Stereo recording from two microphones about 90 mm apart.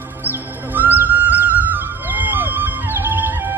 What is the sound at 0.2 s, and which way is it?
Music, 20° right (ahead or behind).